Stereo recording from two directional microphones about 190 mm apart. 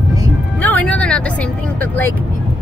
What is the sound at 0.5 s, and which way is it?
Speech, 10° left (ahead or behind).